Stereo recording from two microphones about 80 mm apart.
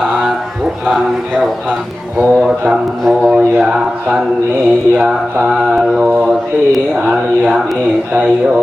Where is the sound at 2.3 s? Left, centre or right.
Centre.